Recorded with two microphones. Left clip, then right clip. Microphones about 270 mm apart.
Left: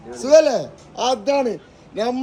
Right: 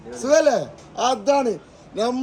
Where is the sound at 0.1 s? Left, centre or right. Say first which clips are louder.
Left 3 dB; centre.